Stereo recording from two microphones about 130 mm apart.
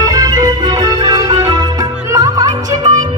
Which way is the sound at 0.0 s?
30° right (ahead or behind).